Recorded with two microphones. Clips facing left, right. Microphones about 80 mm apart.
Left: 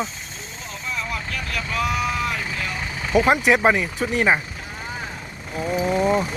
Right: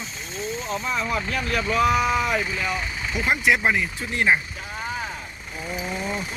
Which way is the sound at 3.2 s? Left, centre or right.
Left.